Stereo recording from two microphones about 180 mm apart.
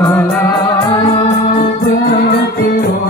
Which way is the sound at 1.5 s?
45° left (ahead or behind).